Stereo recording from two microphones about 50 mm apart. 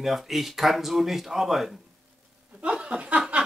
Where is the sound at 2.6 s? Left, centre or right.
Right.